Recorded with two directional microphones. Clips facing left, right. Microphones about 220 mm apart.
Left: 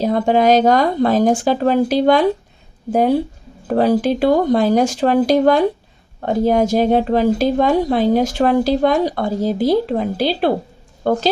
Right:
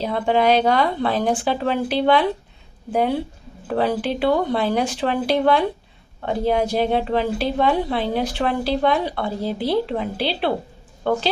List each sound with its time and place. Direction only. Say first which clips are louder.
0.0 s a woman's voice: left 5 dB; 40° left (ahead or behind)